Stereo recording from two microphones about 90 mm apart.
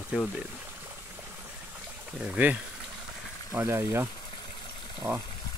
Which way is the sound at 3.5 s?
25° right (ahead or behind).